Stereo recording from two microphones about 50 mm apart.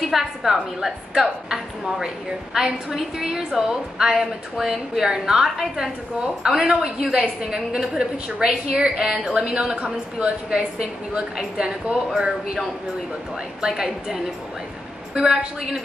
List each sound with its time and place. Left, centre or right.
0.1 s a woman's voice: centre
5.0 s a woman's voice: centre
13.6 s a woman's voice: centre